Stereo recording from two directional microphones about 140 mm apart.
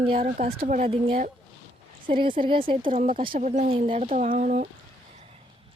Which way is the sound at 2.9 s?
65° right (ahead or behind).